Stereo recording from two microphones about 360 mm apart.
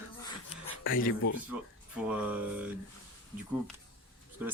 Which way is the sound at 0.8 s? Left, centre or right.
Left.